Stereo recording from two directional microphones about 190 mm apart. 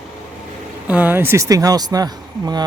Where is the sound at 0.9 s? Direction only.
10° right (ahead or behind).